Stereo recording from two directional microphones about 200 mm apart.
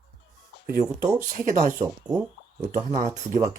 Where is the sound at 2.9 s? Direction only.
40° right (ahead or behind).